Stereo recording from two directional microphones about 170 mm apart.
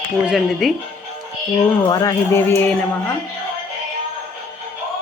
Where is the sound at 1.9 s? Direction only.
20° left (ahead or behind).